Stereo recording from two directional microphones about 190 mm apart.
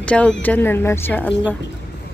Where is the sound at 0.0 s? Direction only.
5° left (ahead or behind).